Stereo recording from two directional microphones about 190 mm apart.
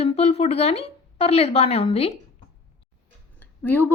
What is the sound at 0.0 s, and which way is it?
A woman's voice, 35° left (ahead or behind).